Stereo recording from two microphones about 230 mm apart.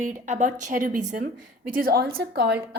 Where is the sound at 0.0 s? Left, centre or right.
Right.